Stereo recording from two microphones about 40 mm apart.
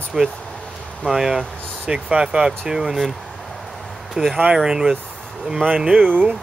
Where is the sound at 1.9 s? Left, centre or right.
Right.